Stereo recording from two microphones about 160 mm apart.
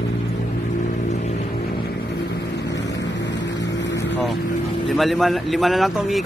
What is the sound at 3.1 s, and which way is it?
Vehicle, 90° left.